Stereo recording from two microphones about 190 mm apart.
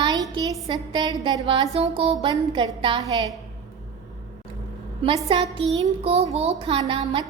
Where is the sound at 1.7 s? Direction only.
30° right (ahead or behind).